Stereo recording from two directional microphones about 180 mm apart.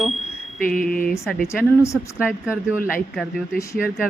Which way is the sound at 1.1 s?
Centre (ahead or behind).